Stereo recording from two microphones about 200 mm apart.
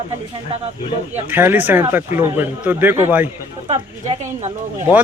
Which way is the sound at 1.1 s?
10° right (ahead or behind).